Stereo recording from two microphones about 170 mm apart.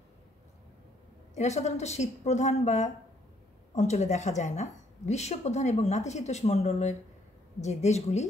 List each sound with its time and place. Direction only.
1.3 s a woman's voice: 40° left (ahead or behind)